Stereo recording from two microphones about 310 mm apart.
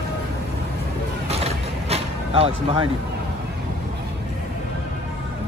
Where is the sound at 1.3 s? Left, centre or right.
Centre.